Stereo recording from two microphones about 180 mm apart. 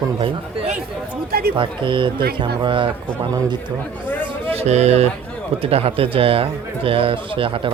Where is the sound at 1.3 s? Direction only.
60° right (ahead or behind).